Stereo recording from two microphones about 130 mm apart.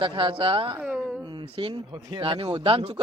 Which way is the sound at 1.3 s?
40° right (ahead or behind).